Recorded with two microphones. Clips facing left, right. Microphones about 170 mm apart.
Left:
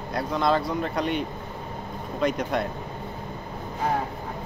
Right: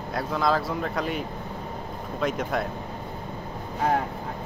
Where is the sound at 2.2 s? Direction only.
Centre (ahead or behind).